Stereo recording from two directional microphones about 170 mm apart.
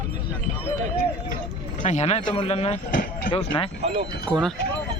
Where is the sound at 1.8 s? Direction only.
40° left (ahead or behind).